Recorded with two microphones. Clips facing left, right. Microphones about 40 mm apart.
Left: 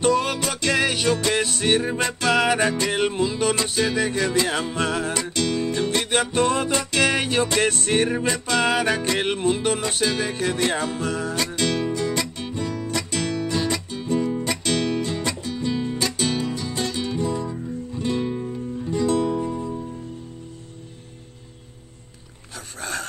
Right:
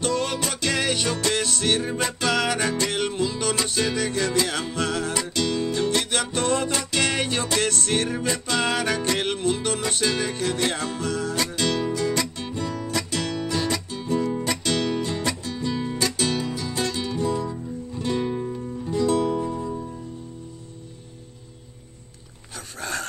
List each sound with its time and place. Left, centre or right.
0.0 s music: centre
0.4 s music: centre
1.3 s music: left
5.3 s music: centre
6.0 s music: centre
8.3 s music: centre
9.2 s music: left
11.3 s music: centre
22.8 s a sound: centre